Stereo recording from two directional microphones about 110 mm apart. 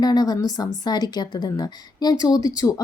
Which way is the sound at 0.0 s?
40° left (ahead or behind).